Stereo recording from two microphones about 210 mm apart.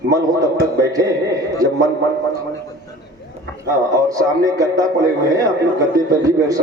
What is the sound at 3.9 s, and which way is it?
Speech, 15° right (ahead or behind).